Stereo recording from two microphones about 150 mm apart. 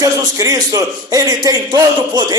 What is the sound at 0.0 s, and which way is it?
A man's voice, 25° right (ahead or behind).